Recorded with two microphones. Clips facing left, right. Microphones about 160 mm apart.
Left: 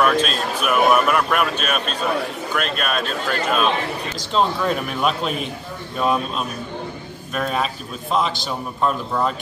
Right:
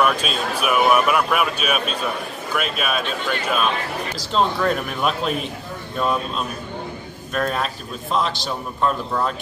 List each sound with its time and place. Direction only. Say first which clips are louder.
0.0 s a man's voice: left 2 dB; 5° right (ahead or behind)